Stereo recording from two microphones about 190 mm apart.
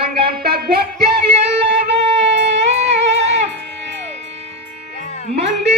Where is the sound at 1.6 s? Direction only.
30° right (ahead or behind).